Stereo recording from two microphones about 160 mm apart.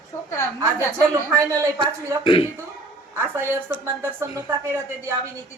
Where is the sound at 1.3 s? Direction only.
20° right (ahead or behind).